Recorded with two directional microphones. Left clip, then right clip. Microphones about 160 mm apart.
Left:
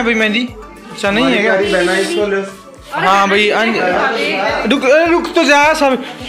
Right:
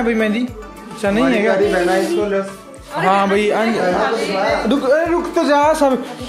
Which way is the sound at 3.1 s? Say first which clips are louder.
Left 4 dB; 20° right (ahead or behind).